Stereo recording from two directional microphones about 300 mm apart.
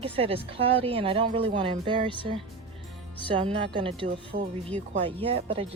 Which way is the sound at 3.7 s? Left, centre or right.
Centre.